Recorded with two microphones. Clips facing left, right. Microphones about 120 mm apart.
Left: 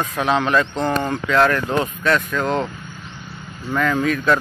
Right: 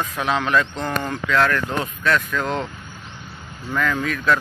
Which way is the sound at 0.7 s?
30° left (ahead or behind).